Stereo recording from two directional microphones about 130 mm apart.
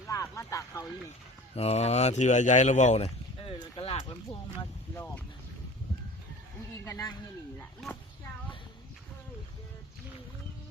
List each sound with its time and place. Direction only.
0.1 s a sound: 25° left (ahead or behind)
1.5 s speech: 55° left (ahead or behind)
6.8 s speech: 20° left (ahead or behind)